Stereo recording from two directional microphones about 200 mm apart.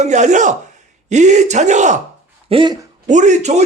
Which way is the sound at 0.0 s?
35° right (ahead or behind).